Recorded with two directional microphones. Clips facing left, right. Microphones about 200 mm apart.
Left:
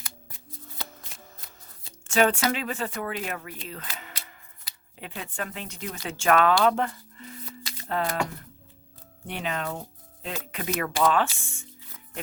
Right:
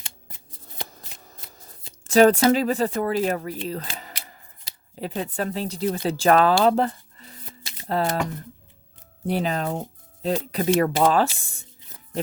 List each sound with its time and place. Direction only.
0.0 s scissors: 25° right (ahead or behind)
2.0 s speech: 35° right (ahead or behind)
7.9 s speech: 35° right (ahead or behind)
9.2 s speech: 35° right (ahead or behind)